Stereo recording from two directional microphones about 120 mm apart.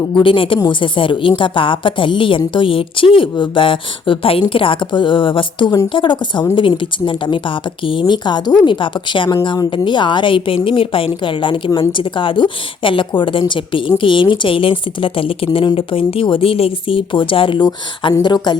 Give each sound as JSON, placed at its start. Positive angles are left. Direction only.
{"t": 0.1, "sound": "a woman's voice", "side_deg": 45}